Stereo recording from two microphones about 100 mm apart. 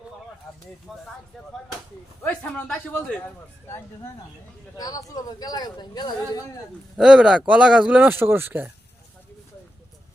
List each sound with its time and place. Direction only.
0.9 s speech: centre (ahead or behind)
2.2 s a man's voice: 15° left (ahead or behind)
4.8 s speech: 40° left (ahead or behind)
6.9 s speech: 5° right (ahead or behind); by 8.7 s 20° right (ahead or behind)